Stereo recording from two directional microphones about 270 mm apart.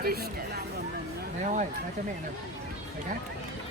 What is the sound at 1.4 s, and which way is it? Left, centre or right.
Speech, right.